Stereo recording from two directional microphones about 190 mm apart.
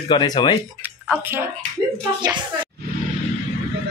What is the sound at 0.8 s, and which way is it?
Speech, 10° right (ahead or behind).